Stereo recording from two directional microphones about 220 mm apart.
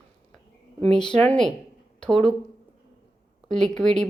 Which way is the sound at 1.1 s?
5° left (ahead or behind).